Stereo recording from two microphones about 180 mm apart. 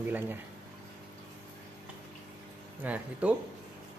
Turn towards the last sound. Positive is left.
turn(degrees=-10)  # may be behind; listen again after turning